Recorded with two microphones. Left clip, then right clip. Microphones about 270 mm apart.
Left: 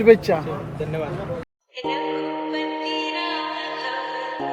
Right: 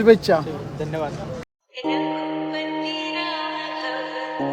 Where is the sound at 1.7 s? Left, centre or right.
Centre.